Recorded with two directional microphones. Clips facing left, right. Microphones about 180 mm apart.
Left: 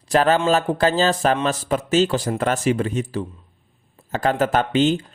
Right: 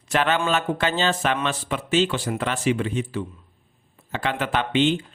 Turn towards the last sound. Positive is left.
turn(degrees=40)  # may be behind; listen again after turning